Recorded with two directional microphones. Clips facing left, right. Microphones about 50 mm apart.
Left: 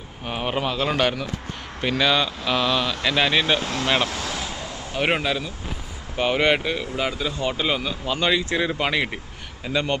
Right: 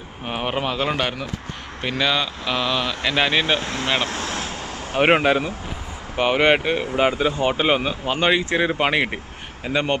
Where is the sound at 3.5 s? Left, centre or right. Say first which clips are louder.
Even; right.